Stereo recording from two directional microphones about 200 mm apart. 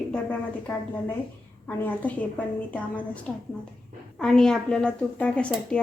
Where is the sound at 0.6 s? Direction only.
10° left (ahead or behind).